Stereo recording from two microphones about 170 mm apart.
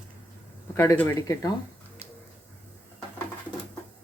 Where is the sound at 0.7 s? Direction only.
15° left (ahead or behind).